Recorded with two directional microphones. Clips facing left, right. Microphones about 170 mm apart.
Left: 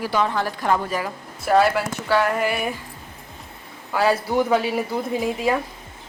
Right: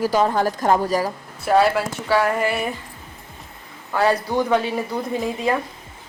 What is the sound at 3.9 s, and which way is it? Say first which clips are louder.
Speech: even; 5° left (ahead or behind).